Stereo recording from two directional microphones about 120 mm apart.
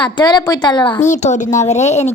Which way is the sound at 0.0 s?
35° left (ahead or behind).